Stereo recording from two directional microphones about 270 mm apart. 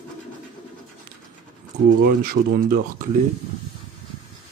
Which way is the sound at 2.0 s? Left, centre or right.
Right.